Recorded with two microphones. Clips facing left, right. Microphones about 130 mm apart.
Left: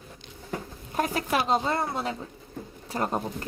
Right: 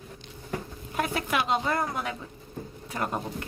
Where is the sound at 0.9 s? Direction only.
35° left (ahead or behind).